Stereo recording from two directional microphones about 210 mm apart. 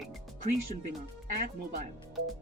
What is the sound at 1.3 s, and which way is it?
Speech, 40° right (ahead or behind).